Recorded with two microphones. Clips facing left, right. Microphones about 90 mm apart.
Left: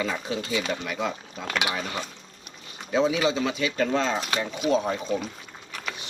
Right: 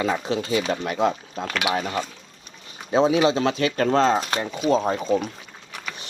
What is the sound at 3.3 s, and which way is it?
Speech, 55° right (ahead or behind).